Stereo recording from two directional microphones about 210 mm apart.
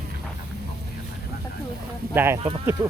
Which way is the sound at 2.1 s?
10° right (ahead or behind).